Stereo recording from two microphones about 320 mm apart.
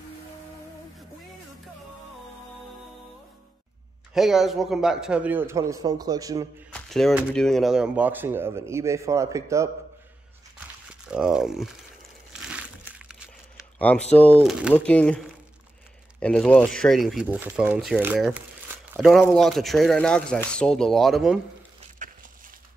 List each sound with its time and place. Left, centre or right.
4.1 s speech: centre
6.7 s speech: centre
11.1 s speech: centre
12.3 s crumpling: centre
14.4 s speech: centre